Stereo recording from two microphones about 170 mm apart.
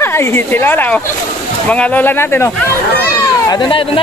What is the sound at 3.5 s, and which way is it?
Speech, 30° left (ahead or behind).